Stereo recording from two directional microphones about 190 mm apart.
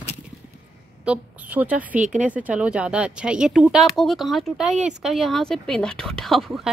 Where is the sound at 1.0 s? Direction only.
5° right (ahead or behind).